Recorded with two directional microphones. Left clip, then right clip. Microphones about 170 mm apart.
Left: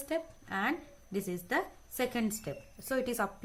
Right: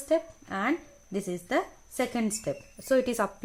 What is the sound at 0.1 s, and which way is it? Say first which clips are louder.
A woman's voice: right 8 dB; 50° right (ahead or behind).